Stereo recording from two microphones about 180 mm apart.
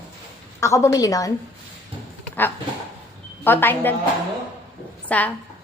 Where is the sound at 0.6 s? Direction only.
15° left (ahead or behind).